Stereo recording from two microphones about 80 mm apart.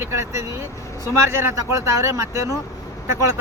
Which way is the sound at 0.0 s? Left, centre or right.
Right.